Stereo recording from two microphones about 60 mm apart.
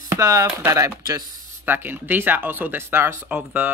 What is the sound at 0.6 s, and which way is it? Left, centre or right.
Speech, right.